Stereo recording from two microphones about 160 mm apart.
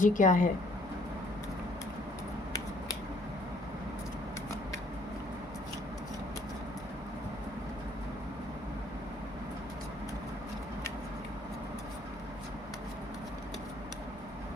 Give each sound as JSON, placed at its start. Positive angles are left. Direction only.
{"t": 0.0, "sound": "speech", "side_deg": 55}